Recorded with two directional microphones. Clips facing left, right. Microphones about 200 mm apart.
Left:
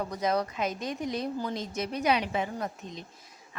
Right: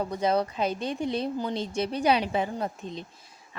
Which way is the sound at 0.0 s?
30° right (ahead or behind).